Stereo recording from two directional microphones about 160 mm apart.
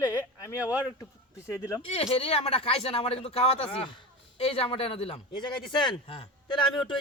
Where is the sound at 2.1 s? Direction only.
35° left (ahead or behind).